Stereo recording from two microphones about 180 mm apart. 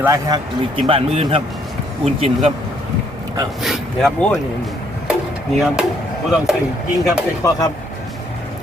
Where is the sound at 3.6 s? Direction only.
Centre (ahead or behind).